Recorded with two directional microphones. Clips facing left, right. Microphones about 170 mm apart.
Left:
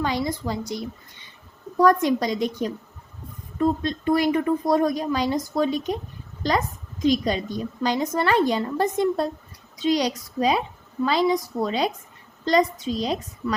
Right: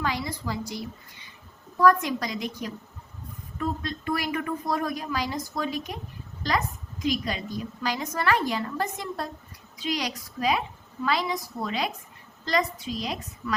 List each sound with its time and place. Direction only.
0.0 s speech: 25° left (ahead or behind)
1.8 s a woman's voice: 30° left (ahead or behind)
7.0 s a woman's voice: 30° left (ahead or behind)